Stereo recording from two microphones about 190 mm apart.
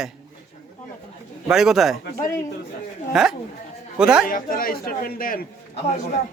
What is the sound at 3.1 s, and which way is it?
A man's voice, 5° right (ahead or behind).